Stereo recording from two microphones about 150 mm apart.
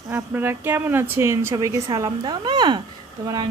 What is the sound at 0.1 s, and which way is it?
Speech, 15° right (ahead or behind).